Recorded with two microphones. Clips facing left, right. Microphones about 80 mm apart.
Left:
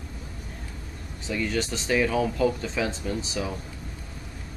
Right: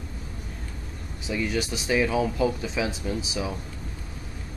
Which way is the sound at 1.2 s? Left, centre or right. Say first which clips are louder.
Even; centre.